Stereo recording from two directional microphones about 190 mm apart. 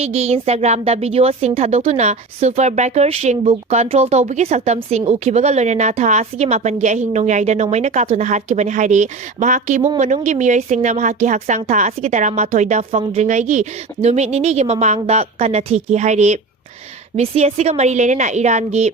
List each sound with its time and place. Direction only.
0.0 s a woman's voice: 35° right (ahead or behind)